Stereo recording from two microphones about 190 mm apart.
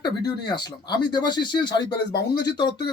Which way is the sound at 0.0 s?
20° left (ahead or behind).